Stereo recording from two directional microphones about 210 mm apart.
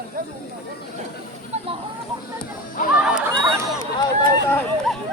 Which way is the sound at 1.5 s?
30° right (ahead or behind).